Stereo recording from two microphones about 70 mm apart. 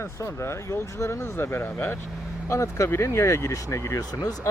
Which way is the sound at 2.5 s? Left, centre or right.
Left.